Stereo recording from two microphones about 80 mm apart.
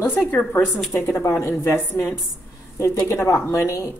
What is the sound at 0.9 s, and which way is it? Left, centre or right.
Speech, left.